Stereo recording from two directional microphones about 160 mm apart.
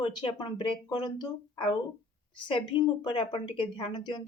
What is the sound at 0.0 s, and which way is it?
Speech, 30° left (ahead or behind).